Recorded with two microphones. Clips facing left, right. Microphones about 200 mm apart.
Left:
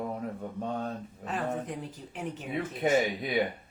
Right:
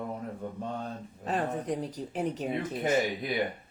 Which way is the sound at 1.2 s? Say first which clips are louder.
Right 2 dB; 35° right (ahead or behind).